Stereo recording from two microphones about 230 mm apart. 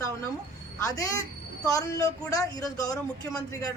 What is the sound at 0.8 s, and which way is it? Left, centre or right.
A woman's voice, centre.